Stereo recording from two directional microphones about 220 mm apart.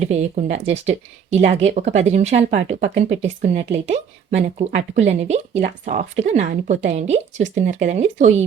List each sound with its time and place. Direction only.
0.0 s speech: 30° right (ahead or behind)